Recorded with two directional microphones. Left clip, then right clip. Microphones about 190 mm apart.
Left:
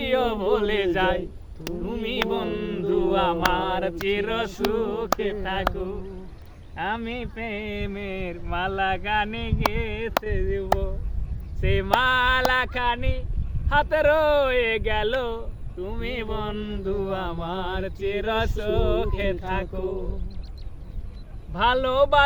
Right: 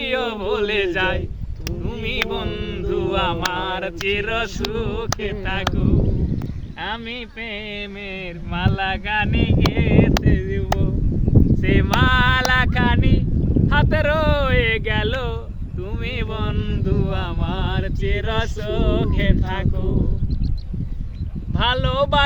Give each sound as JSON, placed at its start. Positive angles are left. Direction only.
{"t": 0.0, "sound": "speech", "side_deg": 20}
{"t": 0.9, "sound": "mantra", "side_deg": 20}
{"t": 6.7, "sound": "a sound", "side_deg": 55}
{"t": 11.6, "sound": "mantra", "side_deg": 15}
{"t": 21.5, "sound": "speech", "side_deg": 25}